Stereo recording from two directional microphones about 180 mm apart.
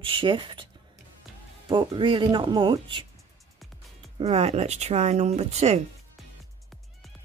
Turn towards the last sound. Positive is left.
turn(degrees=-35)  # may be behind; listen again after turning